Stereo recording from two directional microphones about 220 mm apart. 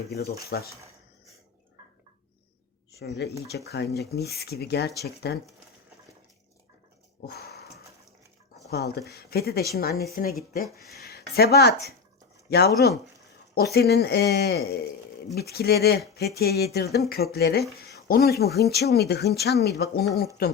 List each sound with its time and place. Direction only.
0.5 s speech: 45° left (ahead or behind)
3.0 s speech: 50° left (ahead or behind)
7.3 s a sound: 45° left (ahead or behind)
9.0 s speech: 45° left (ahead or behind)